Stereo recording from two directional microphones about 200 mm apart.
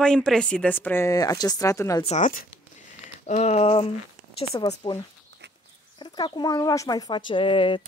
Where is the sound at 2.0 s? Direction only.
40° left (ahead or behind); by 4.9 s 20° left (ahead or behind).